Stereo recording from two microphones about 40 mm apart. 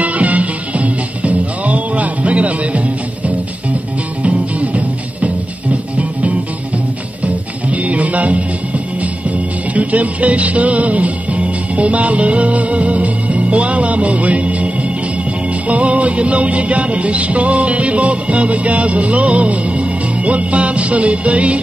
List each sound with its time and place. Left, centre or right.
0.0 s music: right
7.7 s music: right